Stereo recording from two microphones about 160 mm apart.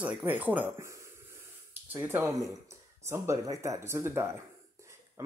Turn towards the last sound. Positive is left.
turn(degrees=-15)  # may be behind; listen again after turning